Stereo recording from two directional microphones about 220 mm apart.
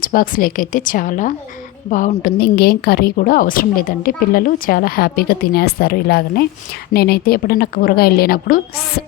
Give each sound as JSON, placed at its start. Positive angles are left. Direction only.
{"t": 0.0, "sound": "a woman's voice", "side_deg": 40}